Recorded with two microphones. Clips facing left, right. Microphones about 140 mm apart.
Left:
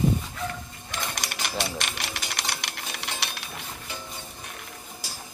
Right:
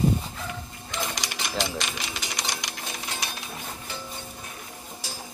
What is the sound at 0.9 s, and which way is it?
Sewing machine, 55° left (ahead or behind).